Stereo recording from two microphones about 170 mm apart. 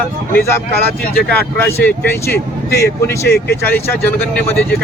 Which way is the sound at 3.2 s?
70° left (ahead or behind).